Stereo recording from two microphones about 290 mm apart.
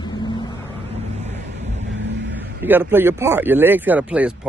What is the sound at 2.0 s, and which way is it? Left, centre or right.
Vehicle, right.